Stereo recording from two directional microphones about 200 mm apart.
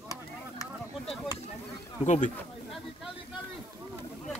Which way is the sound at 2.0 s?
35° left (ahead or behind).